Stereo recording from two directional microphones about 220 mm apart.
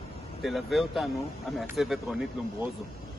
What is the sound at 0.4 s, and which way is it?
Speech, centre (ahead or behind).